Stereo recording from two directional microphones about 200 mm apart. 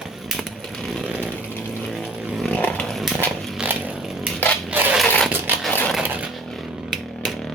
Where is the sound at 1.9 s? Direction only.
Centre (ahead or behind).